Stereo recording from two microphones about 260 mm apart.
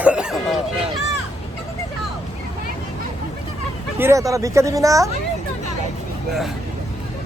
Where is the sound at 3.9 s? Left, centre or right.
Centre.